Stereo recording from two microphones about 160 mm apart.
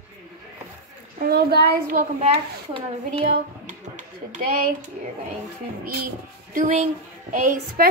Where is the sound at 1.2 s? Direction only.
75° right (ahead or behind).